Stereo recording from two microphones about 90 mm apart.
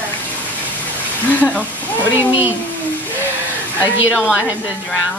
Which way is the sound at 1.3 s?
15° left (ahead or behind).